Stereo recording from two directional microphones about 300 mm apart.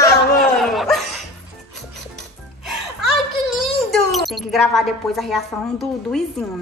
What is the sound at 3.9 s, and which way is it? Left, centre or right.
A woman's voice, centre.